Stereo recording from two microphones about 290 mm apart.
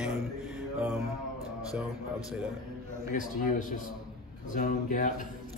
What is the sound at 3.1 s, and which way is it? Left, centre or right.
A man's voice, left.